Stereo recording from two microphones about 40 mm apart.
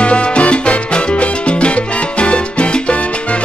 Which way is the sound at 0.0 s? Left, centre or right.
Left.